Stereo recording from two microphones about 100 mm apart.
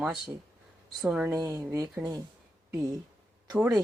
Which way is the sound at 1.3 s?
30° right (ahead or behind).